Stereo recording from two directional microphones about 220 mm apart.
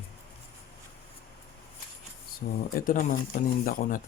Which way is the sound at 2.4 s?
40° left (ahead or behind).